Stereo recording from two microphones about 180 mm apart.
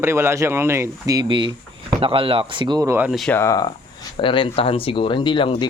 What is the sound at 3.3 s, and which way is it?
Speech, 15° left (ahead or behind).